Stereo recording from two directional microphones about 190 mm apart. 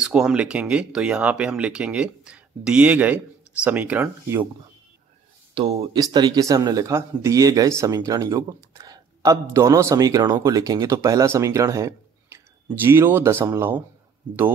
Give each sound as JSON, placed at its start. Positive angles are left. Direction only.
{"t": 0.0, "sound": "speech", "side_deg": -5}
{"t": 5.5, "sound": "speech", "side_deg": -25}